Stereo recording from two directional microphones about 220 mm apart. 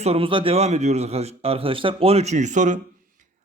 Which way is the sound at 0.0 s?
25° right (ahead or behind).